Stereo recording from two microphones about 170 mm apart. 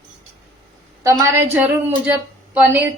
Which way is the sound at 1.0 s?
20° right (ahead or behind).